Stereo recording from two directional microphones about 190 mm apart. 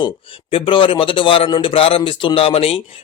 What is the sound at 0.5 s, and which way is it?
A man's voice, 25° left (ahead or behind).